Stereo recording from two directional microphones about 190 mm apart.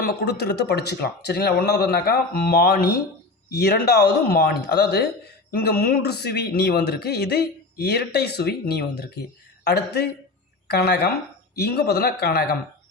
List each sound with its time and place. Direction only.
0.0 s speech: 55° left (ahead or behind)